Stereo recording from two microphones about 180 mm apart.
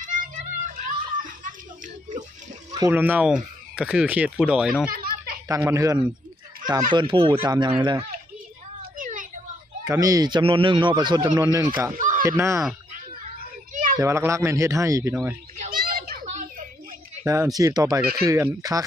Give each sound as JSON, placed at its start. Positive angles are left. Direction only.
{"t": 0.0, "sound": "music", "side_deg": -45}
{"t": 2.7, "sound": "speech", "side_deg": -15}
{"t": 4.9, "sound": "snicker", "side_deg": -50}
{"t": 5.5, "sound": "speech", "side_deg": -15}
{"t": 6.9, "sound": "speech", "side_deg": -25}
{"t": 8.9, "sound": "a sound", "side_deg": -45}
{"t": 9.8, "sound": "speech", "side_deg": -20}
{"t": 11.9, "sound": "a sound", "side_deg": -45}
{"t": 12.3, "sound": "speech", "side_deg": -15}
{"t": 13.9, "sound": "speech", "side_deg": -15}
{"t": 15.5, "sound": "children playing", "side_deg": -45}
{"t": 16.3, "sound": "a sound", "side_deg": -40}
{"t": 17.2, "sound": "speech", "side_deg": -15}